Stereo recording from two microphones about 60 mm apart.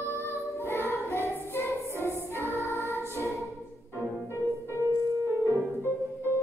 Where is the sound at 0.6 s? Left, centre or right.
Left.